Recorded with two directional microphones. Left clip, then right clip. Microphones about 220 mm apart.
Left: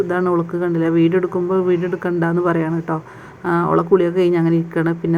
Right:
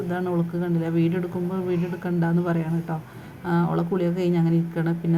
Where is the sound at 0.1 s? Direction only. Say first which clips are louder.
Left 9 dB; 25° left (ahead or behind).